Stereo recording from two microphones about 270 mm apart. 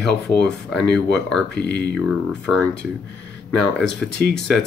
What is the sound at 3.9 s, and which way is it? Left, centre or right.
Speech, left.